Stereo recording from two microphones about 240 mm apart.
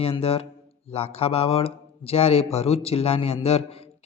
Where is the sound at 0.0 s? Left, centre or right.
Left.